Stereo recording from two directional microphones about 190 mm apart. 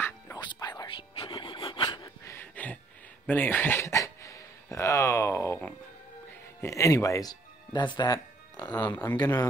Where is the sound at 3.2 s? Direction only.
10° left (ahead or behind).